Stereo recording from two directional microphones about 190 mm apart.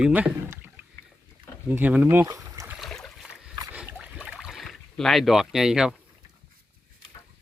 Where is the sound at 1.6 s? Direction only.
10° right (ahead or behind).